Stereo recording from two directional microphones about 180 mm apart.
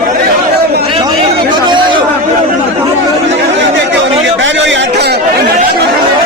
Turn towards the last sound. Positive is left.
turn(degrees=-70)  # may be behind; listen again after turning